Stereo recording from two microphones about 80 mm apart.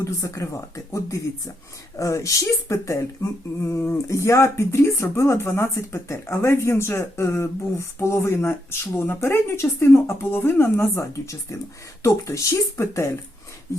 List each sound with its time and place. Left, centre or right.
0.0 s speech: left